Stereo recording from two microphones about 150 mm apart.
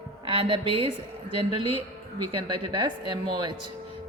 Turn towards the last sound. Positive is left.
turn(degrees=-30)  # may be behind; listen again after turning